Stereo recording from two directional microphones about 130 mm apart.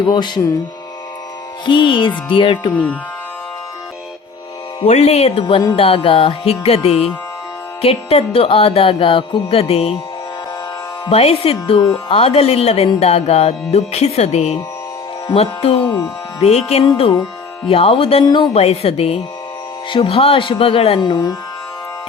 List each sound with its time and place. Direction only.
0.1 s speech: 35° left (ahead or behind)
1.6 s speech: 40° left (ahead or behind)
2.7 s speech: 10° left (ahead or behind)
4.8 s music: 55° left (ahead or behind)
11.0 s music: 50° left (ahead or behind)
21.0 s speech: 30° left (ahead or behind)